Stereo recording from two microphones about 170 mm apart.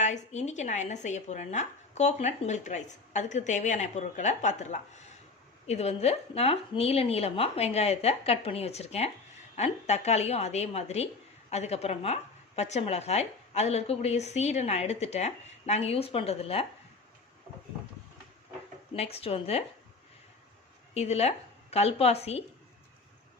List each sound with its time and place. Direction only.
0.0 s a woman's voice: 45° left (ahead or behind)
18.9 s a woman's voice: 35° left (ahead or behind)
20.9 s a woman's voice: 35° left (ahead or behind)